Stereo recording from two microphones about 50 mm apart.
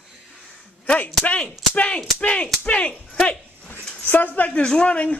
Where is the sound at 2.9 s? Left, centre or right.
Centre.